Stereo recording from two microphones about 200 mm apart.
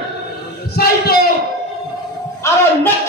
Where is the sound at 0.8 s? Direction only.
50° left (ahead or behind).